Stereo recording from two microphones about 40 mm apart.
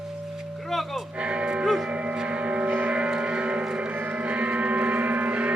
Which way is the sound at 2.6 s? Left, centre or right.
Right.